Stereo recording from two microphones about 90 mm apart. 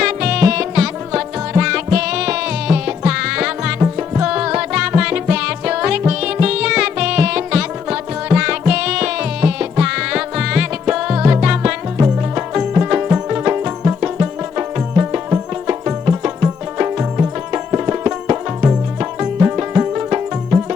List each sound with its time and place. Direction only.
0.0 s music: 10° right (ahead or behind)